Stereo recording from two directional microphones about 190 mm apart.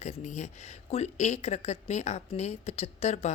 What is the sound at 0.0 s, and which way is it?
Speech, 35° left (ahead or behind).